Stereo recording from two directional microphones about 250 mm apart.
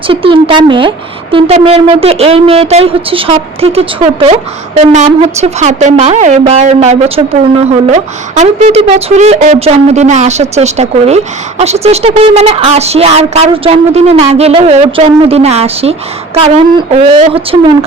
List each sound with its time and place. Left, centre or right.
0.1 s speech: right